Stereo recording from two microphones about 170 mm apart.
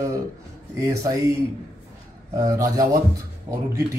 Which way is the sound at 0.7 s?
20° right (ahead or behind).